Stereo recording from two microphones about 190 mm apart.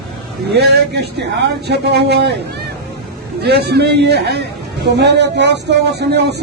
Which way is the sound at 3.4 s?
60° right (ahead or behind).